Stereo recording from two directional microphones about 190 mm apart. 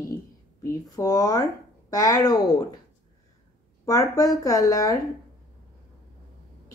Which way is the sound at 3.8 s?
20° left (ahead or behind).